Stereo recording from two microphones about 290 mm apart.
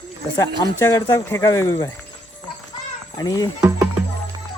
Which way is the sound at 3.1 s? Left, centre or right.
Centre.